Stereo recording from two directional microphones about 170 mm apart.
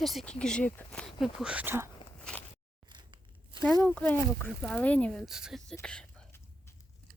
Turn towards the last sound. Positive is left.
turn(degrees=5)  # may be behind; listen again after turning